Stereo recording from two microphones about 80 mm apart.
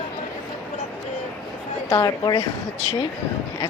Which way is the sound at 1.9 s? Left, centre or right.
Left.